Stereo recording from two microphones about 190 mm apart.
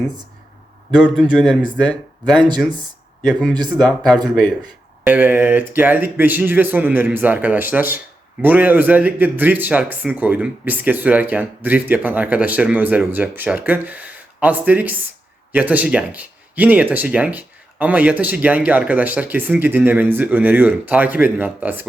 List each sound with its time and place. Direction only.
0.9 s a man's voice: 5° right (ahead or behind)
3.7 s a man's voice: centre (ahead or behind)